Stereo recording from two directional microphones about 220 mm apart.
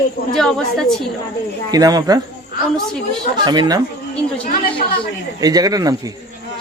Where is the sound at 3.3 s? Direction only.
20° right (ahead or behind).